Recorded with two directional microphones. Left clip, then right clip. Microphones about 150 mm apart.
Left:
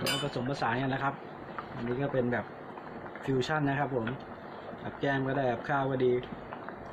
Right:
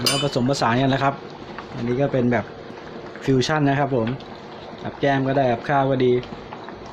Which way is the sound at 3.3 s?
55° right (ahead or behind).